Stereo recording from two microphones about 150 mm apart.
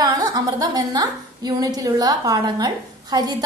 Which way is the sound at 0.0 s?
25° right (ahead or behind).